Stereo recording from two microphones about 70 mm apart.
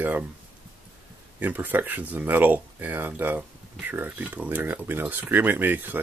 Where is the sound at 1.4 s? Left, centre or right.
Right.